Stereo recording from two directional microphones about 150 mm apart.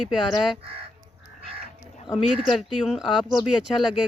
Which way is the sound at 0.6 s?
40° right (ahead or behind).